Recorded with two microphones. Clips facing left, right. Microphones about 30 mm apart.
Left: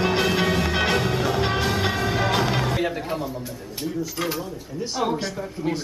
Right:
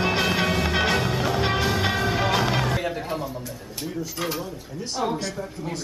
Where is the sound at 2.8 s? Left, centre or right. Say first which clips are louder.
Left 2 dB; centre.